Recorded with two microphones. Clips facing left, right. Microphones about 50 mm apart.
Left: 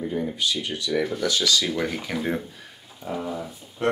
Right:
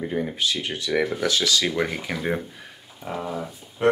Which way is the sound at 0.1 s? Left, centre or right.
Right.